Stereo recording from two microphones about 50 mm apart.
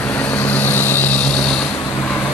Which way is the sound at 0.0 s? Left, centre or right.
Left.